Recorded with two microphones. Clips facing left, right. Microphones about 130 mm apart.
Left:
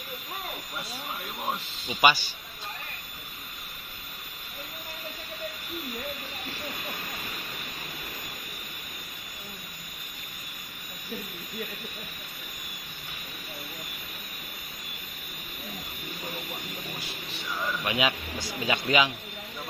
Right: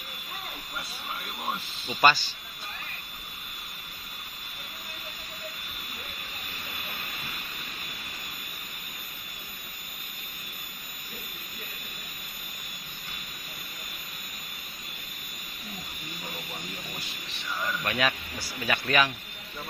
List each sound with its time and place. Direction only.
1.9 s speech: 10° left (ahead or behind)
17.8 s speech: 15° left (ahead or behind)